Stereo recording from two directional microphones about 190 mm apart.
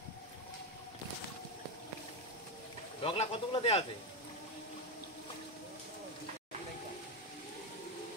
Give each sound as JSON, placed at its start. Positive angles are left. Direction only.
{"t": 3.0, "sound": "speech", "side_deg": 30}